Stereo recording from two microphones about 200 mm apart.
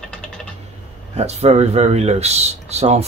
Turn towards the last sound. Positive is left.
turn(degrees=-30)  # may be behind; listen again after turning